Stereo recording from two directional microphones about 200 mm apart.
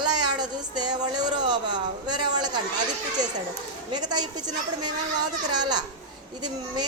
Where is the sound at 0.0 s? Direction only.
20° right (ahead or behind).